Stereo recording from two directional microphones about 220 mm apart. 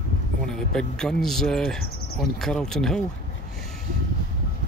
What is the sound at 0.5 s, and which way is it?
Speech, 5° left (ahead or behind).